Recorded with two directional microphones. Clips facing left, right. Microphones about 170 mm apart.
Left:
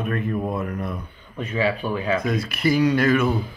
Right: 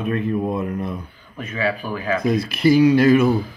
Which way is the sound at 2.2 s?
35° right (ahead or behind).